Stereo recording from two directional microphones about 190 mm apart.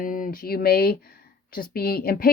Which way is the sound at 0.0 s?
45° left (ahead or behind).